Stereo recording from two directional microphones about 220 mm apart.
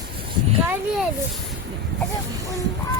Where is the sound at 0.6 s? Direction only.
10° right (ahead or behind).